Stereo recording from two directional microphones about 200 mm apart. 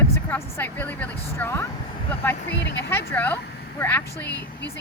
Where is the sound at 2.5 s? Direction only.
60° left (ahead or behind).